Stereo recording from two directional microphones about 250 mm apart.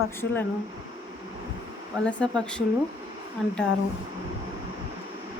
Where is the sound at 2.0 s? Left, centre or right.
Centre.